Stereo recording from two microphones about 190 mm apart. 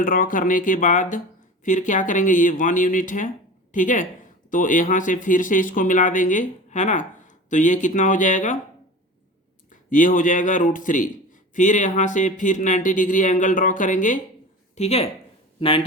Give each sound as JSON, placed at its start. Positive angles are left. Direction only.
{"t": 0.0, "sound": "speech", "side_deg": 45}
{"t": 9.6, "sound": "speech", "side_deg": 45}